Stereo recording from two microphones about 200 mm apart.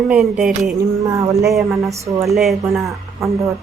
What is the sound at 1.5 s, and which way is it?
Speech, centre (ahead or behind).